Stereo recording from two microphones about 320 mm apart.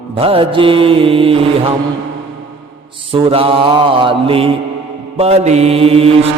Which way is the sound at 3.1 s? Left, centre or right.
Centre.